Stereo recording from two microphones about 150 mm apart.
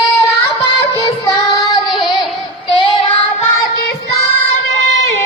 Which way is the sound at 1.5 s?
25° left (ahead or behind).